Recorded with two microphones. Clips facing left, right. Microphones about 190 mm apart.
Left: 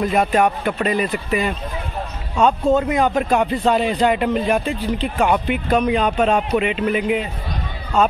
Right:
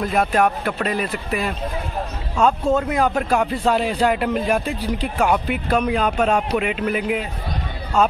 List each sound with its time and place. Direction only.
0.0 s speech: 5° left (ahead or behind)